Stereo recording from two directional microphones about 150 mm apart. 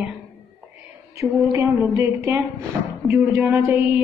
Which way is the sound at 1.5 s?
20° right (ahead or behind).